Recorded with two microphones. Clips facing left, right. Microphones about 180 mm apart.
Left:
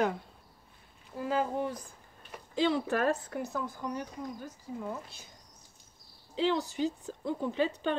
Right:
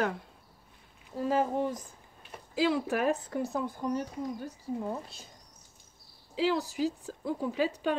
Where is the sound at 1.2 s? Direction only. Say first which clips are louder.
Right 3 dB; 25° right (ahead or behind).